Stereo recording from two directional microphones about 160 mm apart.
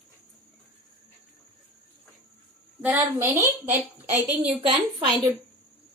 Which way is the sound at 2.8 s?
10° right (ahead or behind).